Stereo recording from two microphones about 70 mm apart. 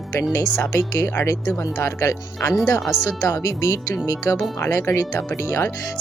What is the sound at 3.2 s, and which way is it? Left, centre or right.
Speech, left.